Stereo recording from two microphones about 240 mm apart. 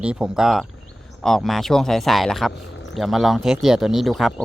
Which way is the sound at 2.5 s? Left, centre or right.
Left.